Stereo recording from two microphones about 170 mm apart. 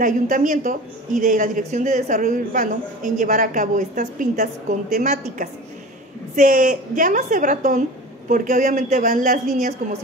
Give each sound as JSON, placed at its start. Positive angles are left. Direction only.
{"t": 0.0, "sound": "a woman's voice", "side_deg": -50}